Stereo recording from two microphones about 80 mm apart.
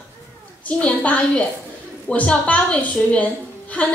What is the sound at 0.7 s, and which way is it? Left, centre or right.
A woman's voice, centre.